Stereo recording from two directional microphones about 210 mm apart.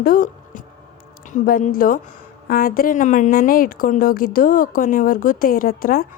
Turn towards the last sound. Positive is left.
turn(degrees=45)  # may be behind; listen again after turning